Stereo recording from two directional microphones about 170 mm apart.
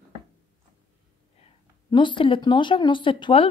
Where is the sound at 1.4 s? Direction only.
35° left (ahead or behind).